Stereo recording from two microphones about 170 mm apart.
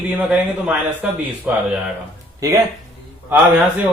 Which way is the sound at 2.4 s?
20° right (ahead or behind).